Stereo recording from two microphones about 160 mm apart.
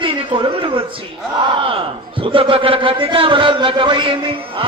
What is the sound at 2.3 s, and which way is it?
A man's voice, 35° right (ahead or behind).